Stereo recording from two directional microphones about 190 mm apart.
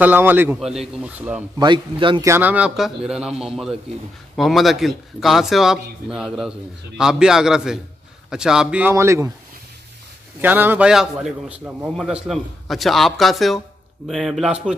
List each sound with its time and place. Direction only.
0.0 s speech: 10° right (ahead or behind)
1.6 s speech: 25° right (ahead or behind)
2.2 s a man's voice: 10° right (ahead or behind)
10.4 s a man's voice: 10° right (ahead or behind)